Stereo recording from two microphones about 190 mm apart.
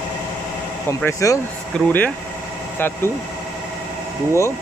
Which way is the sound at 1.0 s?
15° left (ahead or behind).